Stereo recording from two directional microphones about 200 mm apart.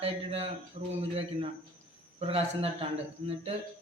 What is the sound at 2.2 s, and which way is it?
Speech, 30° right (ahead or behind).